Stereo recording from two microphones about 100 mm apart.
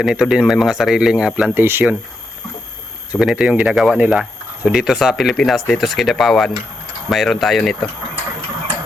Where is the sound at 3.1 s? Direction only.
10° right (ahead or behind).